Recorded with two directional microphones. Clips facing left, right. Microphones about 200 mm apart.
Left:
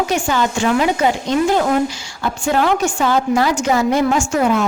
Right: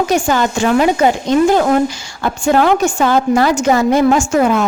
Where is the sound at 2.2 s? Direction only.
50° right (ahead or behind).